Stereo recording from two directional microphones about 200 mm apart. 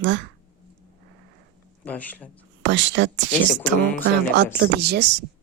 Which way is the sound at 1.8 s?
10° left (ahead or behind).